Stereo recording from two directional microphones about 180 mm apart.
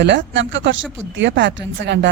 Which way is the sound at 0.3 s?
90° right.